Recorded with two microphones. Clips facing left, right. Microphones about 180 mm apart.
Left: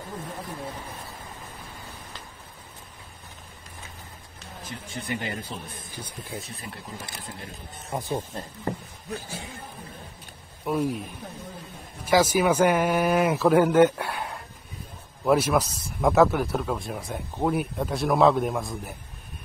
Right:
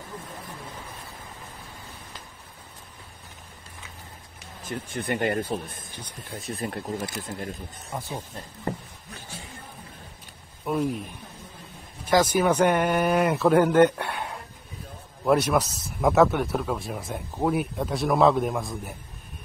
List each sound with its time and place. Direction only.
4.6 s speech: 55° right (ahead or behind)
7.9 s speech: 20° left (ahead or behind)
10.6 s speech: centre (ahead or behind)
12.1 s speech: 10° left (ahead or behind)